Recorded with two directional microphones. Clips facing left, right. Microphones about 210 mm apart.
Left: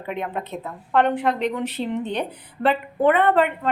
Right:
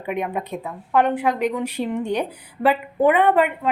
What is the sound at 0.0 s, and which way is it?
A woman's voice, 15° right (ahead or behind).